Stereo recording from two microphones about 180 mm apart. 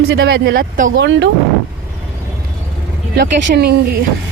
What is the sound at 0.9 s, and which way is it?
Speech, 85° right.